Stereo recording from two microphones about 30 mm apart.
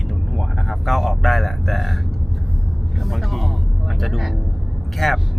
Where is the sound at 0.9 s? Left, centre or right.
Centre.